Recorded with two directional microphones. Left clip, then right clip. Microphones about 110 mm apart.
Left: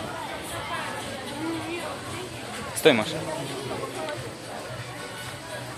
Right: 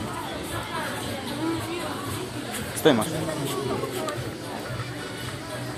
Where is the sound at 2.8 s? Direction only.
60° left (ahead or behind).